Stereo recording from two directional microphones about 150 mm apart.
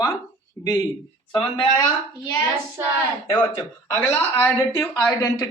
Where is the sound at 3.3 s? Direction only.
15° left (ahead or behind).